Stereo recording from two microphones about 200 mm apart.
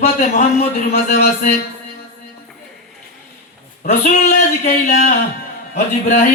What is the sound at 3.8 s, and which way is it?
Speech, 40° left (ahead or behind).